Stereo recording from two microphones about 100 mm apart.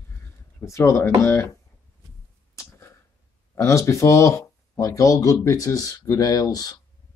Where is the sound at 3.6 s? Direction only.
30° left (ahead or behind).